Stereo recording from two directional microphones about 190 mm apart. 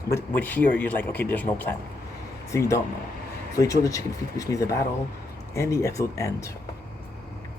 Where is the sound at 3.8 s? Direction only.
15° left (ahead or behind).